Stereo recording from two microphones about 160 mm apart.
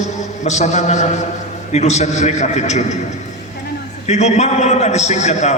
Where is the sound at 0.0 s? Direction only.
45° left (ahead or behind).